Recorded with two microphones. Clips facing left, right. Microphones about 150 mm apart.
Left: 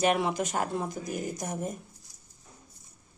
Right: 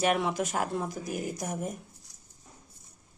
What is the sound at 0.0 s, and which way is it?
Speech, centre (ahead or behind).